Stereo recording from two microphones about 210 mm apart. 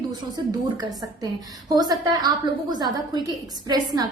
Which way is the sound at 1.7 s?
20° right (ahead or behind).